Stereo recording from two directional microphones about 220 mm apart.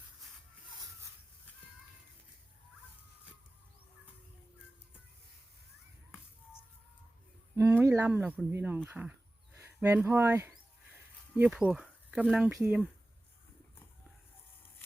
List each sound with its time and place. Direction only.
7.5 s speech: 10° right (ahead or behind)